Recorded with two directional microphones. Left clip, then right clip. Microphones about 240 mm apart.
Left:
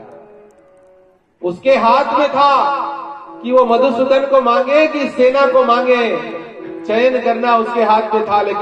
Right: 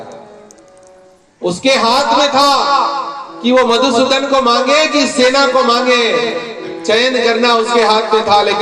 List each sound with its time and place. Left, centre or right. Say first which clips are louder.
1.5 s a man's voice: even; right